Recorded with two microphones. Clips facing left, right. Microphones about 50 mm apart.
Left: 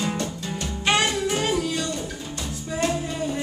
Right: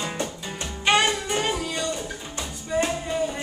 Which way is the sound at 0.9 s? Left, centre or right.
Centre.